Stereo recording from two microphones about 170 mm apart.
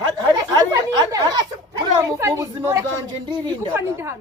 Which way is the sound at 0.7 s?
20° right (ahead or behind).